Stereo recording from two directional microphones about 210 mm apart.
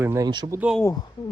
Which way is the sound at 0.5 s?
5° right (ahead or behind).